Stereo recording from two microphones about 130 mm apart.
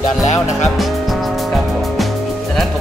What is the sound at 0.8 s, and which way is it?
Music, centre (ahead or behind).